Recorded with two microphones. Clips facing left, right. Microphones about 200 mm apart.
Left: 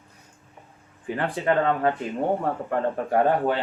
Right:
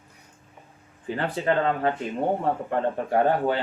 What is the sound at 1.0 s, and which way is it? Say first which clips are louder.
Speech: left 1 dB; 30° right (ahead or behind).